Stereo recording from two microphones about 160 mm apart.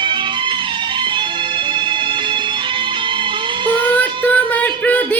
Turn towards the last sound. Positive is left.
turn(degrees=10)  # may be behind; listen again after turning